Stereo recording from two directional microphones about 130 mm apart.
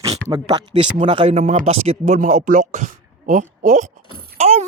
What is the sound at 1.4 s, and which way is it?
Speech, 70° right (ahead or behind).